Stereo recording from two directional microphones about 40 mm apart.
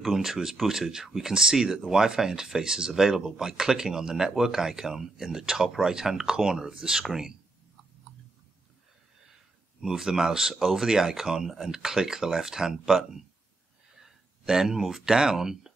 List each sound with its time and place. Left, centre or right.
0.0 s speech: centre
9.8 s speech: centre
14.4 s speech: centre